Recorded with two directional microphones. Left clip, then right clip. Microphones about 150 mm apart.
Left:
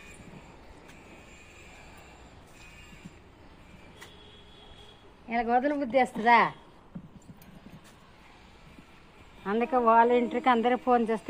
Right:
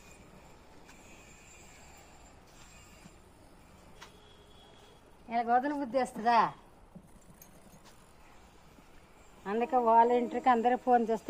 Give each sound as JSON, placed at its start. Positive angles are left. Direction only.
{"t": 5.3, "sound": "speech", "side_deg": 0}
{"t": 5.8, "sound": "a woman's voice", "side_deg": -30}
{"t": 9.4, "sound": "a sound", "side_deg": 20}
{"t": 9.6, "sound": "speech", "side_deg": 0}